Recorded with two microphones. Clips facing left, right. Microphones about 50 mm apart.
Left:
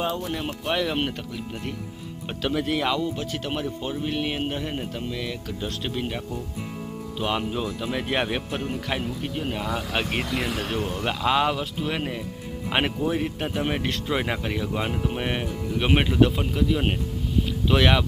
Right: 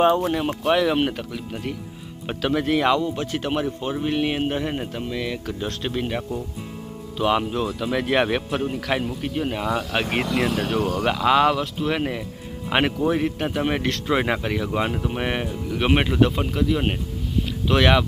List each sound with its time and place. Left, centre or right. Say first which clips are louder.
0.1 s speech: right 9 dB; right
0.3 s speech: right 6 dB; centre
2.2 s speech: right 4 dB; centre